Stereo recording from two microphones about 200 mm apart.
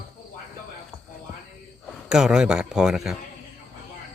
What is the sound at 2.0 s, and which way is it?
Speech, 5° right (ahead or behind).